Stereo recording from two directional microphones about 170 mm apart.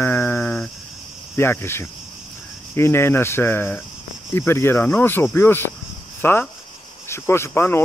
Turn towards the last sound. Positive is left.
turn(degrees=15)  # may be behind; listen again after turning